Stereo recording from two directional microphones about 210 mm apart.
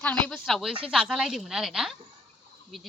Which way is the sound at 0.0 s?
5° left (ahead or behind).